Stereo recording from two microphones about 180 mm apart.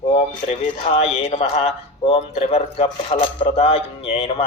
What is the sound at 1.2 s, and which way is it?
Speech, 35° left (ahead or behind).